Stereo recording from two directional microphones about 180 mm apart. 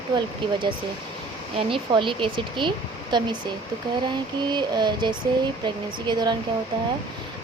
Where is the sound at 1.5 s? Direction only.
30° right (ahead or behind).